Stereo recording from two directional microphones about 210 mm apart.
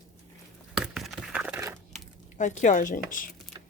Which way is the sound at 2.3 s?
35° left (ahead or behind).